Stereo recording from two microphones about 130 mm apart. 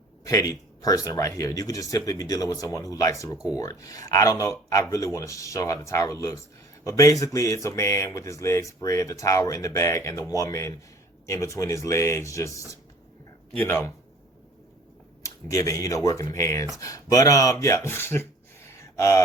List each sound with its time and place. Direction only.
0.3 s speech: 25° left (ahead or behind)
3.3 s speech: 5° right (ahead or behind)
3.6 s speech: 25° left (ahead or behind)
15.2 s speech: 25° left (ahead or behind)